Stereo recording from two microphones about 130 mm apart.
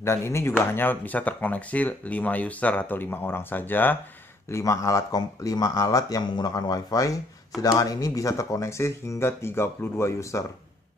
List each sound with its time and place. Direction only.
0.0 s speech: 20° left (ahead or behind)